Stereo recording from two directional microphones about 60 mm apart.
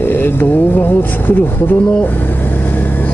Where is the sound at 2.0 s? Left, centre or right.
Left.